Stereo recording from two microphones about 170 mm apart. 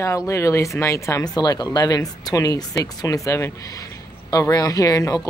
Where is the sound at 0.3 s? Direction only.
15° left (ahead or behind).